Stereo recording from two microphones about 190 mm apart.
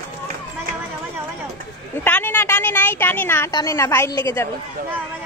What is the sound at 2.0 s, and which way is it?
A woman's voice, 10° left (ahead or behind).